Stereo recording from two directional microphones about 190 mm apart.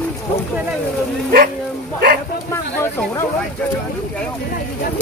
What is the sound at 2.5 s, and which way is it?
Speech, 15° left (ahead or behind).